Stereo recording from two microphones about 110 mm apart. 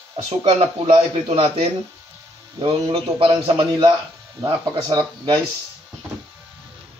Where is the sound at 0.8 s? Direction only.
60° right (ahead or behind).